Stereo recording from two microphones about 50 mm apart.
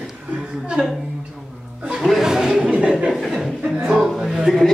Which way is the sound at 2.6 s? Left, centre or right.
Right.